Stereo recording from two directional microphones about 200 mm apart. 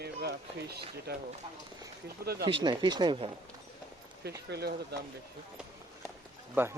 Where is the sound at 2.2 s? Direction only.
50° right (ahead or behind).